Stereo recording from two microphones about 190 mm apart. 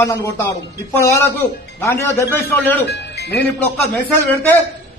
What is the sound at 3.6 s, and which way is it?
Speech, 10° left (ahead or behind).